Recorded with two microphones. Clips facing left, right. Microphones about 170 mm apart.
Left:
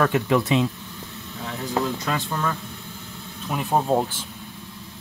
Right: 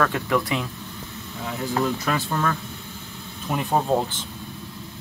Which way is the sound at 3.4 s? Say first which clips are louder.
Even; 5° left (ahead or behind).